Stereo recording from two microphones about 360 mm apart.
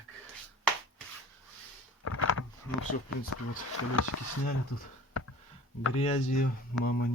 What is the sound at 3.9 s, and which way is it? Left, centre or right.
Speech, left.